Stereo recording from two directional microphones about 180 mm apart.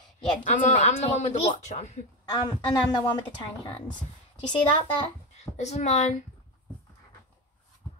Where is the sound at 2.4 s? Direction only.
25° left (ahead or behind).